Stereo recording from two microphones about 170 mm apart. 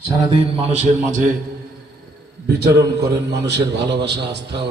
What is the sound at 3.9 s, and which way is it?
Speech, 85° right.